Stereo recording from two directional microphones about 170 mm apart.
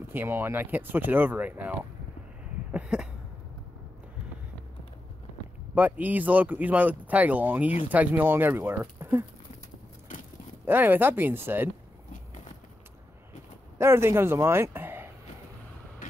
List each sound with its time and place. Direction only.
0.1 s speech: 15° right (ahead or behind)
2.7 s a sound: 5° right (ahead or behind)
5.8 s speech: 10° right (ahead or behind)
10.7 s speech: 10° right (ahead or behind)
13.7 s speech: 15° right (ahead or behind)
16.0 s vehicle: 50° left (ahead or behind)